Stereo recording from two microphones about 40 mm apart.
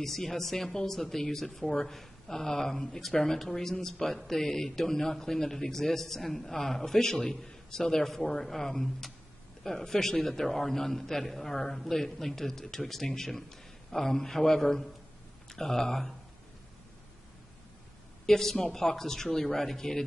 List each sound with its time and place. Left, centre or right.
0.0 s a man's voice: centre
18.2 s a man's voice: centre